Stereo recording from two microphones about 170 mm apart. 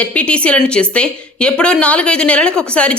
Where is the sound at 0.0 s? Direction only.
5° left (ahead or behind).